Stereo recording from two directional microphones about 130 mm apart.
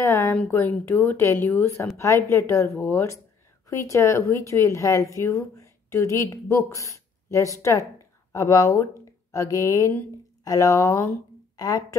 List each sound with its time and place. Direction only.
0.0 s a woman's voice: 20° left (ahead or behind)